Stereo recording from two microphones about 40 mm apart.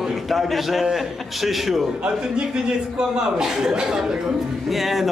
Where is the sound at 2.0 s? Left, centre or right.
Right.